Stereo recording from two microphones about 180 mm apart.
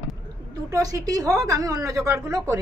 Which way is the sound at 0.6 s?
20° right (ahead or behind).